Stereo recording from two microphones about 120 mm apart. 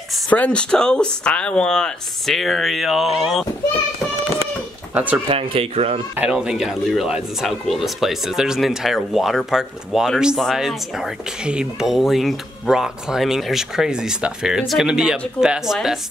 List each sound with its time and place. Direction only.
0.3 s speech: 10° left (ahead or behind)
4.9 s speech: 15° right (ahead or behind)
5.3 s speech: 50° right (ahead or behind)
6.1 s speech: 10° right (ahead or behind)